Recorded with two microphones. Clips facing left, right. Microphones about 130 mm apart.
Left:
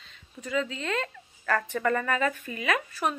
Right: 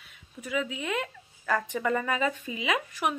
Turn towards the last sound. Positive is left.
turn(degrees=-15)  # may be behind; listen again after turning